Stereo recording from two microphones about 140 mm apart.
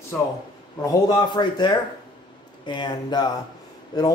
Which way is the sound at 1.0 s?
30° left (ahead or behind).